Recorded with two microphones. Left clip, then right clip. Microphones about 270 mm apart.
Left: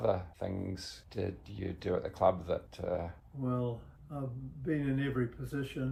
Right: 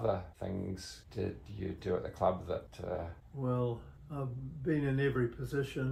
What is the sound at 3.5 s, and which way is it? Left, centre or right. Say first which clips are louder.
Speech: right 1 dB; centre.